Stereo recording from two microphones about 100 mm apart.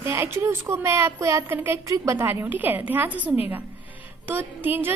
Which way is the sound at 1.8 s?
35° right (ahead or behind).